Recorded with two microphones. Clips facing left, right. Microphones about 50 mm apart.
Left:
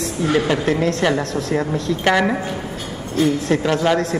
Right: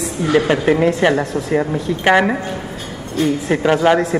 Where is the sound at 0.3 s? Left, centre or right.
Right.